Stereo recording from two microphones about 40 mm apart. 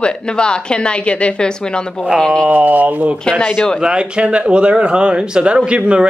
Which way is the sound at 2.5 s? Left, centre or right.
Right.